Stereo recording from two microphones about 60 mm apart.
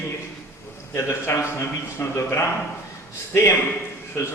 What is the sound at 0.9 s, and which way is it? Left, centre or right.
A man's voice, left.